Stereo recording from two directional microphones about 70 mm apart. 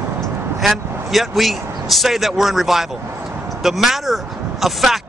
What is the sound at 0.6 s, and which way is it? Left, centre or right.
Speech, centre.